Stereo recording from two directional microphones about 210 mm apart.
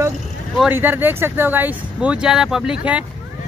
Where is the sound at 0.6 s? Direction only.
10° right (ahead or behind).